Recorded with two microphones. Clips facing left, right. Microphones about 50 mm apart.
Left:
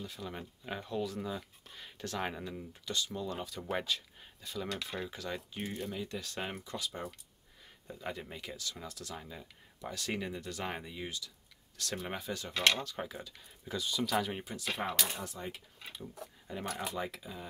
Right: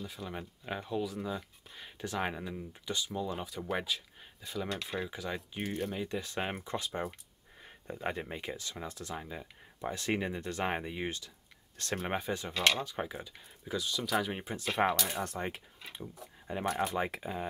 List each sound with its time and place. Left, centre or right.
0.0 s speech: centre
3.7 s a sound: centre
4.7 s speech: centre
5.6 s speech: right
12.8 s speech: centre
13.7 s speech: centre
14.4 s speech: right
15.1 s speech: right
15.9 s speech: right
16.9 s speech: right